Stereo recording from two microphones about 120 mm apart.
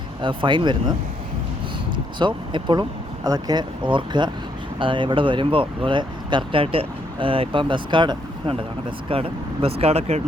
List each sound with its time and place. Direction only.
0.2 s speech: 45° right (ahead or behind)
2.1 s speech: 40° right (ahead or behind)
9.0 s speech: 50° right (ahead or behind)